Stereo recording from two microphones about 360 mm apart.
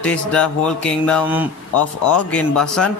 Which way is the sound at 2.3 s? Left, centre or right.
Centre.